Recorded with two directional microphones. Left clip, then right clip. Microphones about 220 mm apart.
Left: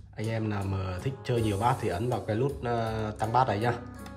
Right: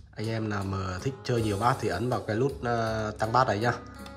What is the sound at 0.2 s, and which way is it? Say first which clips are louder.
Speech: right 1 dB; 10° right (ahead or behind).